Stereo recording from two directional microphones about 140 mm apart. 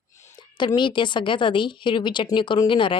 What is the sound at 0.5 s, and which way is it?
A woman's voice, 35° left (ahead or behind).